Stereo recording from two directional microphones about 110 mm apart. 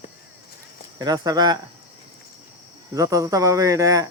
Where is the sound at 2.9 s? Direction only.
30° right (ahead or behind).